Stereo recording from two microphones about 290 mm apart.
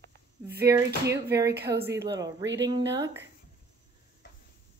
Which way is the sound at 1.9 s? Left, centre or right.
Right.